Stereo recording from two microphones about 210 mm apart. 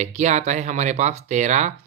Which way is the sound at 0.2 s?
35° right (ahead or behind).